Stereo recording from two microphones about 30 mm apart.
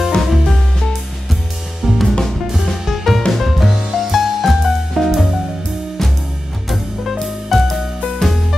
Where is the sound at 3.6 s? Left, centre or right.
Centre.